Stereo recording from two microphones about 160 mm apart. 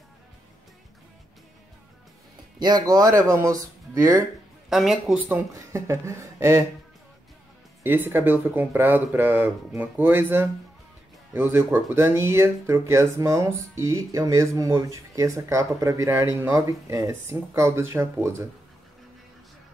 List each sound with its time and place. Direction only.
2.6 s speech: 25° right (ahead or behind)
4.6 s speech: centre (ahead or behind)
5.5 s speech: 20° right (ahead or behind)
7.8 s speech: 15° right (ahead or behind)